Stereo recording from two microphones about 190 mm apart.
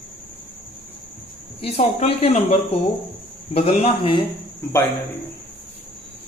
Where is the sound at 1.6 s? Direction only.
30° left (ahead or behind).